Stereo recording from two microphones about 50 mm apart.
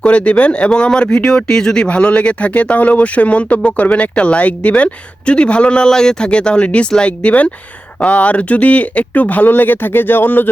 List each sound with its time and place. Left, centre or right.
0.0 s speech: left